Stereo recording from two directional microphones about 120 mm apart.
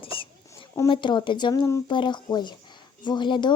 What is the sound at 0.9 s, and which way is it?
Speech, 40° left (ahead or behind).